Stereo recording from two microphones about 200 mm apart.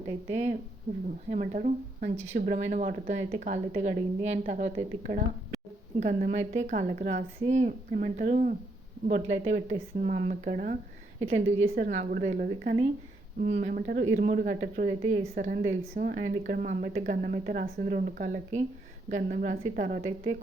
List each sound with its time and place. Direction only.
0.3 s a woman's voice: 35° right (ahead or behind)
11.3 s a woman's voice: 30° right (ahead or behind)
11.7 s a woman's voice: 45° right (ahead or behind)